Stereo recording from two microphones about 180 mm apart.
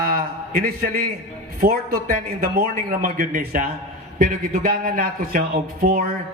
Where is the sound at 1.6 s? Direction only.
55° right (ahead or behind).